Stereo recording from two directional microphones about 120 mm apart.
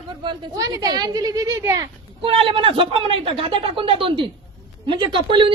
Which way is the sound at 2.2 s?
50° right (ahead or behind).